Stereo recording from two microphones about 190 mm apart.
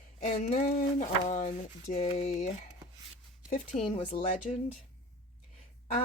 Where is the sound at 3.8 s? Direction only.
30° left (ahead or behind).